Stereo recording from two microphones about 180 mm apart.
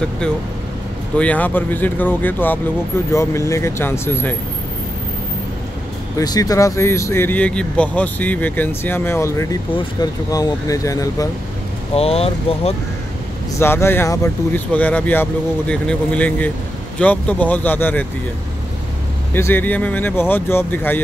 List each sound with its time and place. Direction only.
1.1 s speech: 5° left (ahead or behind)
6.1 s speech: 20° left (ahead or behind)
11.9 s speech: 35° left (ahead or behind)
13.6 s speech: 15° left (ahead or behind)
19.3 s speech: 10° left (ahead or behind)